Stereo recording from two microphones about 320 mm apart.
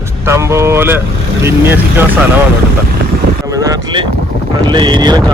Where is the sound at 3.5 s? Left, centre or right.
Centre.